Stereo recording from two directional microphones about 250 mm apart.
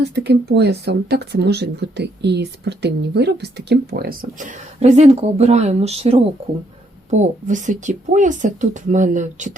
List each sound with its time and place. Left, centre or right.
0.0 s speech: right